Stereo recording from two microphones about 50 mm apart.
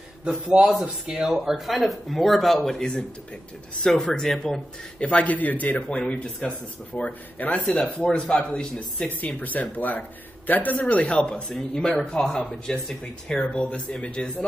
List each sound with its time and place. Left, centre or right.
0.2 s a man's voice: centre
0.8 s speech: centre
5.0 s speech: left
5.9 s speech: left
7.6 s speech: centre
9.2 s speech: left